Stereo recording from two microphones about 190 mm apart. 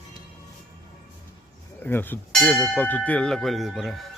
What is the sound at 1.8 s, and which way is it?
Speech, 10° left (ahead or behind).